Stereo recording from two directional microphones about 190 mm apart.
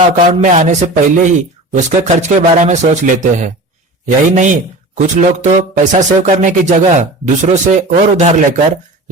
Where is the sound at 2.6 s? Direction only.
40° right (ahead or behind).